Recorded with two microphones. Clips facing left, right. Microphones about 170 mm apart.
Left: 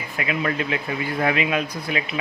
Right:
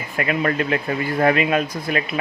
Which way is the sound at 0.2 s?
50° right (ahead or behind).